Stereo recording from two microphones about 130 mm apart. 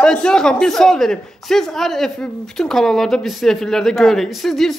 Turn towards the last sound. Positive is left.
turn(degrees=0)  # may be behind; listen again after turning